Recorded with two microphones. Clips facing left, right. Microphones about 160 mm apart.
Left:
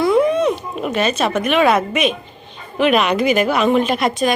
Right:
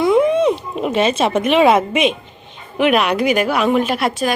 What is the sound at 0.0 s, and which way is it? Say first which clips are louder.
Wail: right 1 dB; 20° right (ahead or behind).